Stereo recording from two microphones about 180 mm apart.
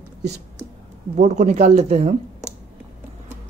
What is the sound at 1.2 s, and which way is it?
Speech, 40° right (ahead or behind).